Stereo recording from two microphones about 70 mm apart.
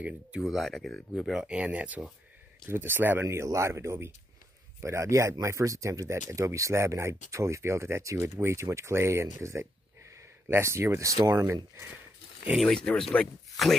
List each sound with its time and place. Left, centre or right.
0.4 s speech: centre
1.3 s speech: centre
1.6 s speech: right
2.7 s speech: right
3.4 s speech: right
12.6 s speech: centre
13.6 s speech: centre